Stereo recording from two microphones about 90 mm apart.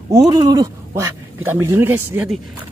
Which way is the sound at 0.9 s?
30° right (ahead or behind).